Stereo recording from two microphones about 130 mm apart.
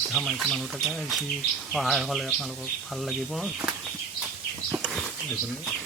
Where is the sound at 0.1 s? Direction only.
Centre (ahead or behind).